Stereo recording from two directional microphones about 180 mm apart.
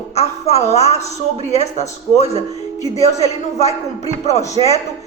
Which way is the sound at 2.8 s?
40° left (ahead or behind).